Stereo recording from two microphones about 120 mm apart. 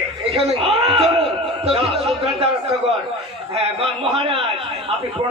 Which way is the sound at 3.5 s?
55° right (ahead or behind).